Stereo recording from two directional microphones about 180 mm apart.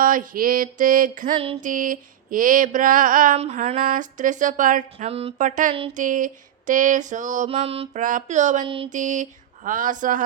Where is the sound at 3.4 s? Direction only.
40° right (ahead or behind).